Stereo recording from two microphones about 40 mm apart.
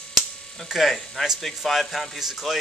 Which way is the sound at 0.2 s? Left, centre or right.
Centre.